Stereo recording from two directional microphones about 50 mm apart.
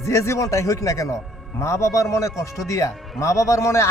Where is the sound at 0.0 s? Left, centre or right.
Left.